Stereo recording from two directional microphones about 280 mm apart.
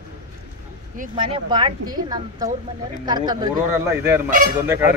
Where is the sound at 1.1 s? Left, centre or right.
Centre.